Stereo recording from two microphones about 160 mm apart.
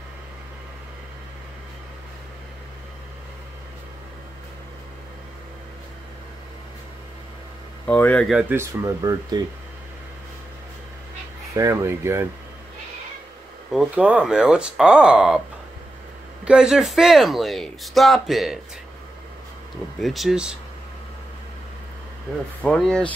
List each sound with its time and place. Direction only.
7.8 s speech: 10° left (ahead or behind)
8.4 s speech: 10° right (ahead or behind)
8.8 s speech: 20° right (ahead or behind)
11.5 s speech: 20° right (ahead or behind)
13.7 s speech: 5° right (ahead or behind)
16.4 s speech: 5° right (ahead or behind)
20.0 s speech: centre (ahead or behind)
22.6 s speech: 5° left (ahead or behind)